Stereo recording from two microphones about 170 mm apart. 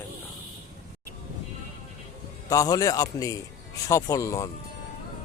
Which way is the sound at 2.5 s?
20° left (ahead or behind).